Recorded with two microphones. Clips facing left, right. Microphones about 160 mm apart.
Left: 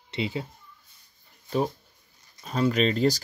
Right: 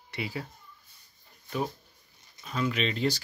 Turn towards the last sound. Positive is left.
turn(degrees=40)  # may be behind; listen again after turning